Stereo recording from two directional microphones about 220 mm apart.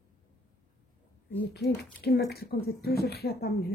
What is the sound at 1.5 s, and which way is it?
A woman's voice, 45° left (ahead or behind).